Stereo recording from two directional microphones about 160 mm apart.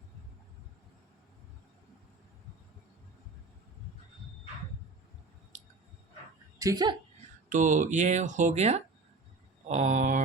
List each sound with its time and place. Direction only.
6.6 s speech: 25° right (ahead or behind)
7.5 s speech: 50° right (ahead or behind)
9.6 s a sound: 45° right (ahead or behind)